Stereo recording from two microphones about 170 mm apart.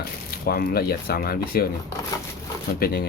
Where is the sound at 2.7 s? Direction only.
65° left (ahead or behind).